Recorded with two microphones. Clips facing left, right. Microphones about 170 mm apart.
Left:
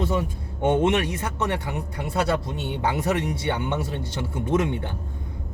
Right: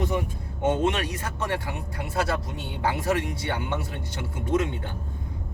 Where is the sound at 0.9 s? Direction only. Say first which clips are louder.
Left 4 dB; 25° left (ahead or behind).